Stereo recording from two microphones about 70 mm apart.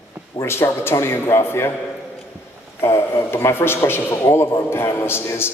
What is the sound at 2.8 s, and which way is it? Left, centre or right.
A man's voice, left.